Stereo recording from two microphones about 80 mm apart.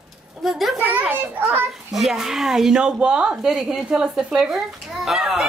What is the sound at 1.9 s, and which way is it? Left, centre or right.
Speech, centre.